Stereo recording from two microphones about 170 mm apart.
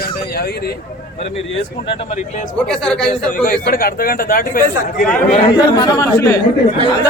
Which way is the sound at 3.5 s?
60° left (ahead or behind).